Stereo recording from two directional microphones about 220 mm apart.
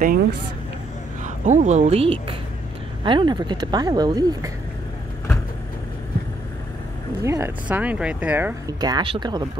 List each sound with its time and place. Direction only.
0.0 s speech: 40° right (ahead or behind); by 4.5 s 20° right (ahead or behind)
7.2 s speech: 10° right (ahead or behind)